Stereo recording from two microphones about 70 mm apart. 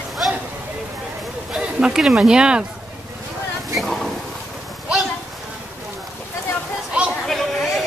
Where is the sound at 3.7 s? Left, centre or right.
Centre.